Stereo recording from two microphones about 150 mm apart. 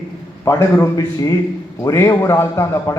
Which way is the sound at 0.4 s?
20° left (ahead or behind).